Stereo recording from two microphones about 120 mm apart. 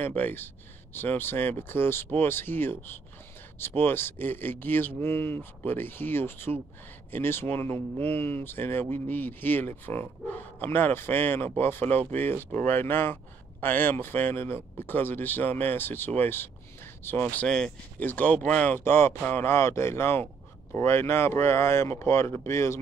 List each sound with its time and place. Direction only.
0.0 s speech: 15° left (ahead or behind)
17.5 s speech: 5° left (ahead or behind)
17.9 s speech: 15° left (ahead or behind)